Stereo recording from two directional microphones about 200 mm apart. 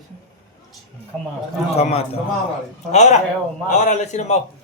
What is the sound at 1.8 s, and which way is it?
A man's voice, 30° left (ahead or behind).